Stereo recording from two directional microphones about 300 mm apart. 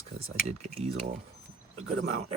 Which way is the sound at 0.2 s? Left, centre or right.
Right.